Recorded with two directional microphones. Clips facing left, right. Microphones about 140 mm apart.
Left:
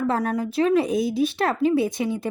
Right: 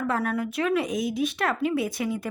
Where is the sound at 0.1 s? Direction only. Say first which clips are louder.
Left 3 dB; 35° left (ahead or behind).